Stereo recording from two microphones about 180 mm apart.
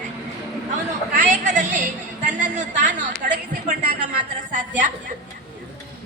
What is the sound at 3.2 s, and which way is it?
Speech, 50° right (ahead or behind).